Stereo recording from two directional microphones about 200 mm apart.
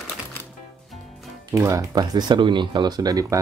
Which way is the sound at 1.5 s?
15° right (ahead or behind).